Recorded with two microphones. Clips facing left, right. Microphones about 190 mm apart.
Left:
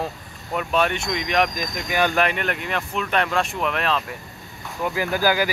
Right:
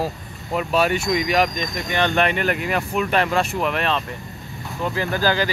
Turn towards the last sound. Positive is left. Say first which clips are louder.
# even
turn(degrees=15)  # may be behind; listen again after turning